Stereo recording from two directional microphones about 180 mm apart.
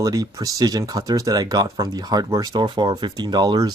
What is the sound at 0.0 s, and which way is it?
Speech, 20° right (ahead or behind).